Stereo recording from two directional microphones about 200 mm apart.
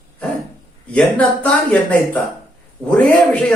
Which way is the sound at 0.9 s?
5° left (ahead or behind).